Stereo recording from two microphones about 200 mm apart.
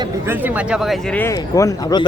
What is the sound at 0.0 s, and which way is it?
Speech, 10° right (ahead or behind).